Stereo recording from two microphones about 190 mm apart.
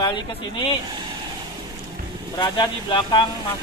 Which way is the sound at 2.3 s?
25° left (ahead or behind).